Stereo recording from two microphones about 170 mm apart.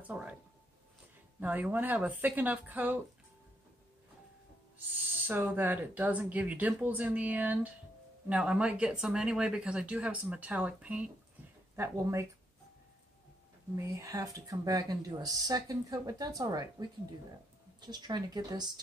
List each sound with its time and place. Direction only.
0.0 s speech: 10° right (ahead or behind)
1.4 s speech: 10° right (ahead or behind)
5.2 s speech: 10° right (ahead or behind)
13.7 s speech: 20° right (ahead or behind)
17.7 s speech: 25° right (ahead or behind)